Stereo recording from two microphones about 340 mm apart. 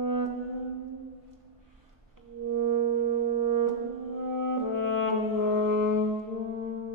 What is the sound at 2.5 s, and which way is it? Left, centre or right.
Music, right.